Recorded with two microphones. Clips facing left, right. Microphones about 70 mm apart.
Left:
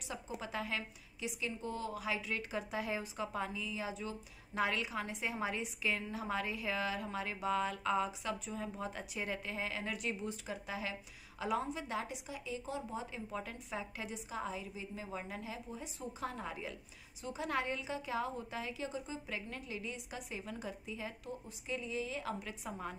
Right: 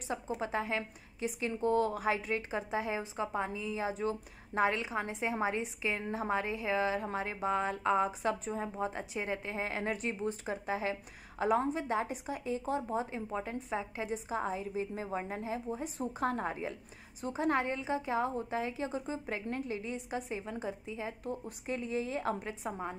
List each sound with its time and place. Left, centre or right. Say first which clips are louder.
0.1 s a woman's voice: right 7 dB; right
21.3 s speech: right 5 dB; right